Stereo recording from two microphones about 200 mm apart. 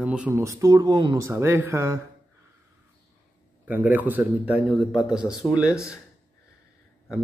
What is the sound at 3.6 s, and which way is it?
Speech, 10° right (ahead or behind).